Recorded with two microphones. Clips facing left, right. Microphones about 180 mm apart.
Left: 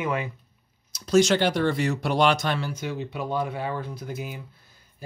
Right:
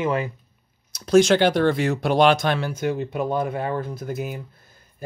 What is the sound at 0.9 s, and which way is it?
Speech, 55° right (ahead or behind).